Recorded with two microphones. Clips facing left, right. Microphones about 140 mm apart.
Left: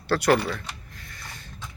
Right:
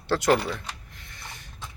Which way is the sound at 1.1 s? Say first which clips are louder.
Even; 20° right (ahead or behind).